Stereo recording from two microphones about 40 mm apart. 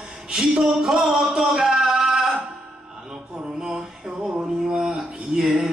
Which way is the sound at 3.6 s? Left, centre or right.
Centre.